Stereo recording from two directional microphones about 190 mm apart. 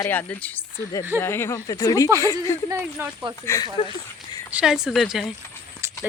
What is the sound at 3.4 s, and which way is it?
Speech, 15° left (ahead or behind).